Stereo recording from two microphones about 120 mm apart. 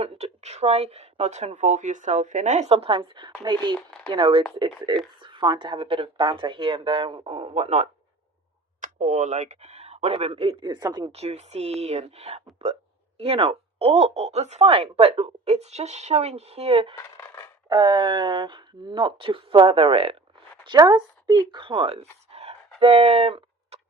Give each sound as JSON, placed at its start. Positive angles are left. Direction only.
{"t": 0.0, "sound": "speech", "side_deg": -65}
{"t": 3.8, "sound": "speech", "side_deg": 10}
{"t": 4.1, "sound": "speech", "side_deg": -45}
{"t": 8.8, "sound": "speech", "side_deg": -90}
{"t": 10.6, "sound": "speech", "side_deg": -35}
{"t": 11.1, "sound": "speech", "side_deg": -65}
{"t": 17.7, "sound": "speech", "side_deg": -40}
{"t": 20.7, "sound": "speech", "side_deg": -35}